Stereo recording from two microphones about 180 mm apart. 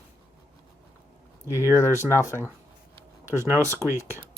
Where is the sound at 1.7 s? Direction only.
15° left (ahead or behind).